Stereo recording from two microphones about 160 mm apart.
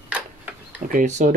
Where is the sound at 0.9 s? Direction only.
50° right (ahead or behind).